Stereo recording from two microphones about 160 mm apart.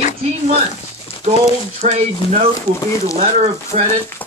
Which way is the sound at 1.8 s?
45° right (ahead or behind).